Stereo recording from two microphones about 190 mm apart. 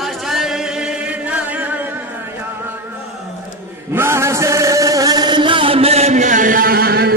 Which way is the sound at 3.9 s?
15° right (ahead or behind).